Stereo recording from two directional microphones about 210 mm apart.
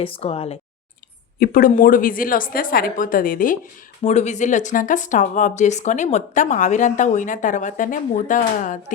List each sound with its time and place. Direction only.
0.0 s speech: 30° left (ahead or behind)
1.4 s speech: 40° left (ahead or behind)